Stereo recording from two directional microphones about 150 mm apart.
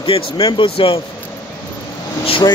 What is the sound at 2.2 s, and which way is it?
Speech, 35° left (ahead or behind).